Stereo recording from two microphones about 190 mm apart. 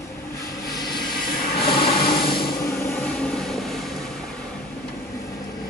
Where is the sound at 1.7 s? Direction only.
50° left (ahead or behind).